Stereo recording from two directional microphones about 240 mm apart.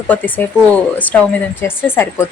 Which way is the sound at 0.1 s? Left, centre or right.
Centre.